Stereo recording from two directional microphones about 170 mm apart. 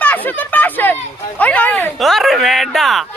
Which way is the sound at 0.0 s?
10° left (ahead or behind).